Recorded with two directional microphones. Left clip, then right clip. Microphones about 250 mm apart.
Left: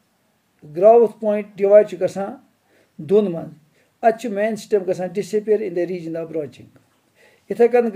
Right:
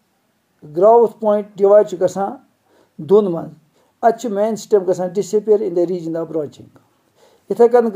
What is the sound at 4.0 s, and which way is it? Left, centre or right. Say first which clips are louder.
Speech: right 2 dB; centre.